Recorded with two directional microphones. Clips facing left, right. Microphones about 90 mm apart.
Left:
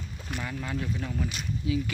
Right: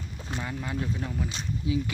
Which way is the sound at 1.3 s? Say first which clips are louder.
Right 1 dB; 25° right (ahead or behind).